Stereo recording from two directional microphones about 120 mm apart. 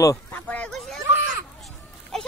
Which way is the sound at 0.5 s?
10° left (ahead or behind).